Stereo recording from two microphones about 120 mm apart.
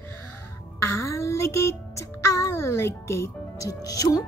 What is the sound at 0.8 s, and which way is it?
A child's voice, 25° left (ahead or behind).